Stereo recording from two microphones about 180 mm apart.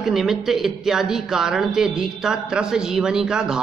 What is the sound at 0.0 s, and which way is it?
Speech, centre (ahead or behind).